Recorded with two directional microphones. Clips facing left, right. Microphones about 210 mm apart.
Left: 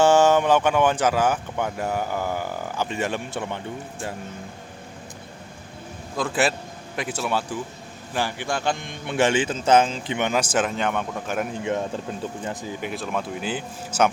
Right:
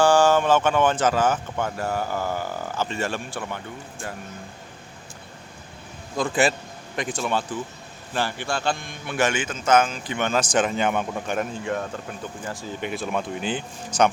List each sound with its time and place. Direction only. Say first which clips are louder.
0.0 s speech: left 1 dB; 20° left (ahead or behind)
6.1 s speech: right 1 dB; centre (ahead or behind)
11.6 s speech: left 2 dB; 20° left (ahead or behind)
12.8 s speech: right 2 dB; centre (ahead or behind)